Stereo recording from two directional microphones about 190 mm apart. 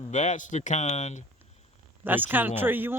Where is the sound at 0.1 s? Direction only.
40° left (ahead or behind).